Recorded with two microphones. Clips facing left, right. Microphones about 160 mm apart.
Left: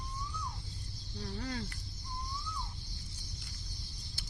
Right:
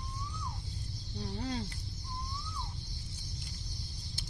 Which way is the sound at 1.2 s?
20° right (ahead or behind).